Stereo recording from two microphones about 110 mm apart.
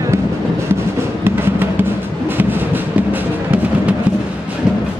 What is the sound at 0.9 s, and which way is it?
Music, 20° right (ahead or behind).